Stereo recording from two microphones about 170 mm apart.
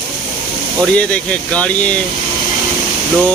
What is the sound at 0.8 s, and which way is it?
Speech, 5° left (ahead or behind).